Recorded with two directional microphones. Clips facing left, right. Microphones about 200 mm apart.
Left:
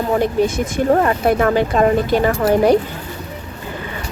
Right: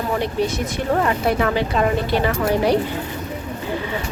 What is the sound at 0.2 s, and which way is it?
Speech, 50° left (ahead or behind).